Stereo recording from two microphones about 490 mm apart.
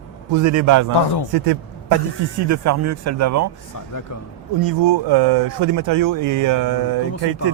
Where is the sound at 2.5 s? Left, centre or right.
Right.